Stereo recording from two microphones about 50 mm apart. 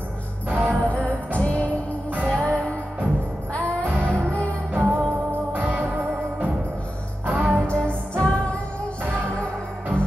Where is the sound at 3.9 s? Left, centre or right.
Right.